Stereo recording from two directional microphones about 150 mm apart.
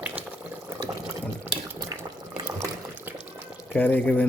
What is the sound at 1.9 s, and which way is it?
Boiling, 25° right (ahead or behind).